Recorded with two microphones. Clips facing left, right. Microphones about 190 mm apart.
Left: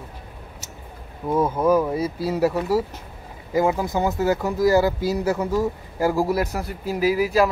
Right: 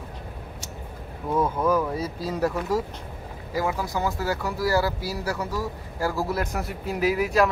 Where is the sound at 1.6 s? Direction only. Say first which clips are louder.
Left 4 dB; 15° left (ahead or behind).